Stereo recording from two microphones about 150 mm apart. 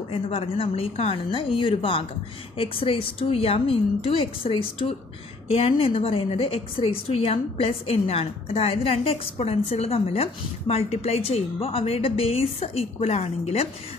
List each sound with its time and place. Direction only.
0.1 s a woman's voice: 40° left (ahead or behind)